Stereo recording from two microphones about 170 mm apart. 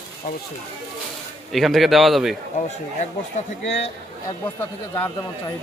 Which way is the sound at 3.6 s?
40° left (ahead or behind).